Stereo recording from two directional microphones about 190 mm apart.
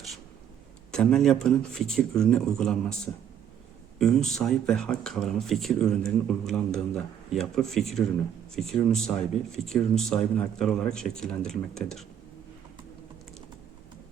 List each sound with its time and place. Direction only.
0.9 s speech: 5° left (ahead or behind)
3.9 s speech: 5° left (ahead or behind)